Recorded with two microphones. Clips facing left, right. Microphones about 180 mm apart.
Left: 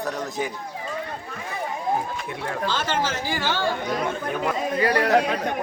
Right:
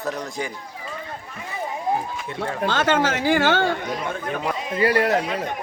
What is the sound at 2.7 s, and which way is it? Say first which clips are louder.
Speech: right 6 dB; 65° right (ahead or behind).